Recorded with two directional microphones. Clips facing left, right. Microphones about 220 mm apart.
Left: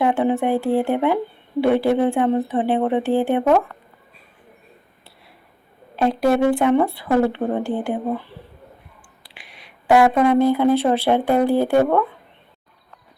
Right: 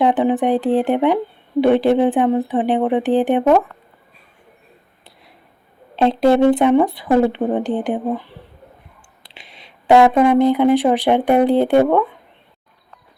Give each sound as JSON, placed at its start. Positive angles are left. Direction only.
{"t": 0.0, "sound": "speech", "side_deg": -15}
{"t": 6.0, "sound": "speech", "side_deg": -25}